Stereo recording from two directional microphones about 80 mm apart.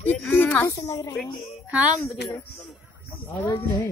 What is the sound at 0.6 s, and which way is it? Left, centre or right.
Speech, left.